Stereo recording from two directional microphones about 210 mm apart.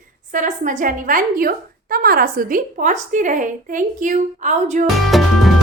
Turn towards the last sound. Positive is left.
turn(degrees=0)  # may be behind; listen again after turning